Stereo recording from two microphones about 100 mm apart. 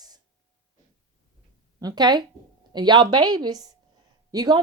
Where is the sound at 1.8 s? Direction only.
45° right (ahead or behind).